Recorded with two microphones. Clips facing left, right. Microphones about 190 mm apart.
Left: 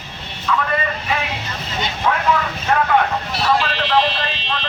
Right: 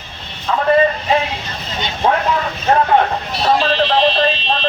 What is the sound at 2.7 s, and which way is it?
Vehicle, 35° right (ahead or behind).